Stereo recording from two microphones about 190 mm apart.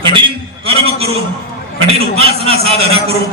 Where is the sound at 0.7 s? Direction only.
30° right (ahead or behind).